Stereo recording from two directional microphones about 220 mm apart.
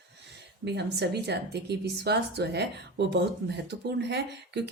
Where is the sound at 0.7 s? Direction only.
50° right (ahead or behind).